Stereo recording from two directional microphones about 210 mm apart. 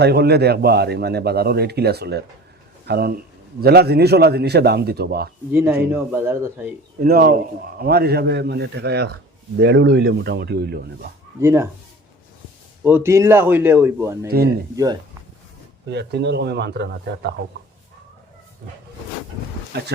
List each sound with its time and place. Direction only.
0.0 s a man's voice: 50° right (ahead or behind)
5.5 s speech: 10° right (ahead or behind)
7.0 s a man's voice: 45° right (ahead or behind)
11.3 s speech: 15° right (ahead or behind)
12.8 s speech: 10° right (ahead or behind)
14.3 s a man's voice: 50° right (ahead or behind)
15.9 s a man's voice: 55° right (ahead or behind)
19.7 s a man's voice: 50° right (ahead or behind)